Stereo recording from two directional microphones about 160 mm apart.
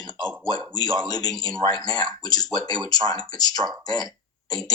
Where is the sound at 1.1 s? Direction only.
25° left (ahead or behind).